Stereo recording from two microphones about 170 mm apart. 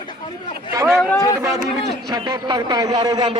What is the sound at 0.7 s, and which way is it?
Speech, 20° right (ahead or behind).